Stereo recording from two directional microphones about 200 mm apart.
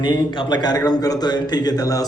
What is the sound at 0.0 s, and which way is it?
Speech, 20° left (ahead or behind).